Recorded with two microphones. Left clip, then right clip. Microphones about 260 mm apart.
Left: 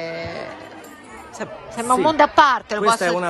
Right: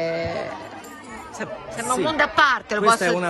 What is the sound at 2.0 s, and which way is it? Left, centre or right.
Speech, centre.